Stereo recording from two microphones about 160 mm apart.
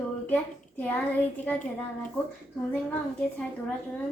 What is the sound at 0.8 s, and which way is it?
Speech, 10° left (ahead or behind).